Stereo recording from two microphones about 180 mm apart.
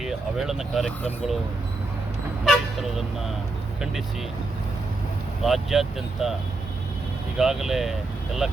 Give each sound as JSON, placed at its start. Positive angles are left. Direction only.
{"t": 0.0, "sound": "speech", "side_deg": 0}
{"t": 2.4, "sound": "toot", "side_deg": 0}
{"t": 5.4, "sound": "speech", "side_deg": 0}
{"t": 7.3, "sound": "speech", "side_deg": 0}